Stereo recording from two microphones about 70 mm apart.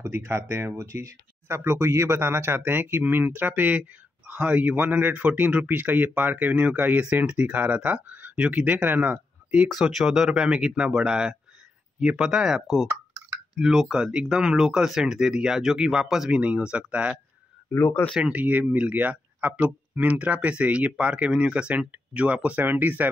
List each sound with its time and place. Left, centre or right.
0.0 s speech: right
9.7 s speech: centre
17.6 s speech: left
18.2 s speech: right